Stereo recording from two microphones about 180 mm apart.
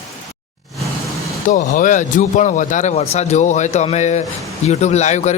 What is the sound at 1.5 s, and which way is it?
Speech, 45° left (ahead or behind).